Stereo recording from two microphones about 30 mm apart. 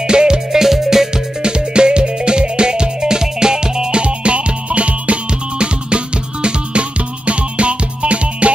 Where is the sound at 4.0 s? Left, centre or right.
Right.